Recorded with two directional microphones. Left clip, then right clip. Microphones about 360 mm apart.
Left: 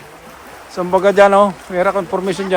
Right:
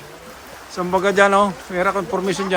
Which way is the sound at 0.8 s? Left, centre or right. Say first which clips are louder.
Left 5 dB; centre.